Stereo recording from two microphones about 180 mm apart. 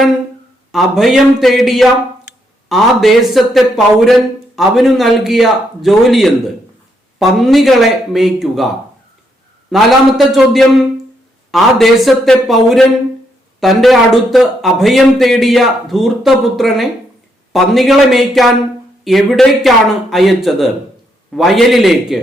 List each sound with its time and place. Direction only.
0.7 s a man's voice: centre (ahead or behind)